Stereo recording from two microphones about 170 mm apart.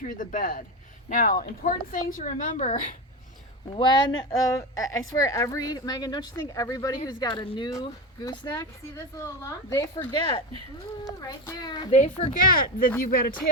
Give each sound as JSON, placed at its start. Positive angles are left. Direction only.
{"t": 0.0, "sound": "a woman's voice", "side_deg": 50}
{"t": 3.8, "sound": "a woman's voice", "side_deg": 25}
{"t": 11.9, "sound": "a woman's voice", "side_deg": 45}